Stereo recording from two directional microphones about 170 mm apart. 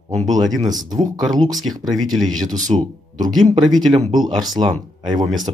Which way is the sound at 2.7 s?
35° right (ahead or behind).